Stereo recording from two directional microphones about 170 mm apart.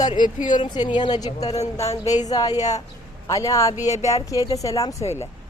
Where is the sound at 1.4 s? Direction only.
40° left (ahead or behind).